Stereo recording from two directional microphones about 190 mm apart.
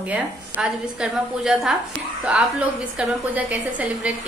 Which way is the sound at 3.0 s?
5° right (ahead or behind).